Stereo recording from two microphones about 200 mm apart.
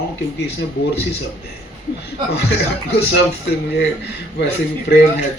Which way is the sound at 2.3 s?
55° left (ahead or behind).